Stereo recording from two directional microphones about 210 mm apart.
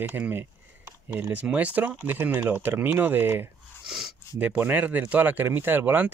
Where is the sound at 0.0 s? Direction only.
10° right (ahead or behind).